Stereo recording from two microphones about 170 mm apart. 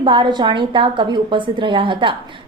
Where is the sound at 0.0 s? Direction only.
30° right (ahead or behind).